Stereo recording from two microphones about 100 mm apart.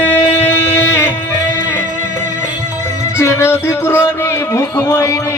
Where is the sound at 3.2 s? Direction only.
25° left (ahead or behind).